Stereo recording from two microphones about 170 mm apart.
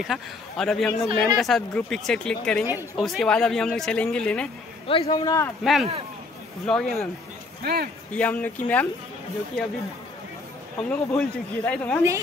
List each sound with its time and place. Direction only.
0.0 s speech: centre (ahead or behind)
4.8 s a man's voice: 30° left (ahead or behind)
5.6 s speech: centre (ahead or behind)
7.6 s speech: 65° right (ahead or behind)
8.1 s speech: 10° left (ahead or behind)
10.8 s speech: 5° left (ahead or behind)